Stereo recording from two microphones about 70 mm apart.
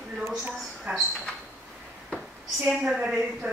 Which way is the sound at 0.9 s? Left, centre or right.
Right.